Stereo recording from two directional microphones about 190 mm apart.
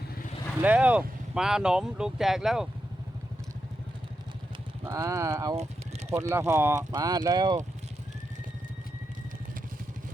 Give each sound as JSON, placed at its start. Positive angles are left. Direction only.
{"t": 0.6, "sound": "speech", "side_deg": -10}
{"t": 4.9, "sound": "speech", "side_deg": -15}